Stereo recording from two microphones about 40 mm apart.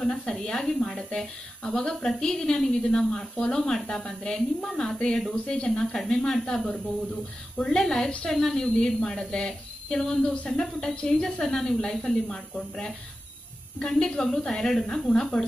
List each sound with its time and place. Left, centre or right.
0.0 s a woman's voice: centre
4.6 s a woman's voice: centre
5.3 s speech: left
5.9 s a woman's voice: centre
13.9 s a woman's voice: centre